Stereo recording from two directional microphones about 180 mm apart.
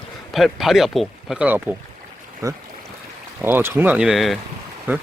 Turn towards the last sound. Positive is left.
turn(degrees=-10)  # may be behind; listen again after turning